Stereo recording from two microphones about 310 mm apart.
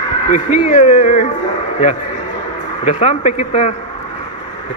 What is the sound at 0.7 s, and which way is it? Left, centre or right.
Speech, left.